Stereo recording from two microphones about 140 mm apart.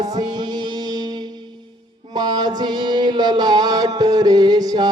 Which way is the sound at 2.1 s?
30° right (ahead or behind).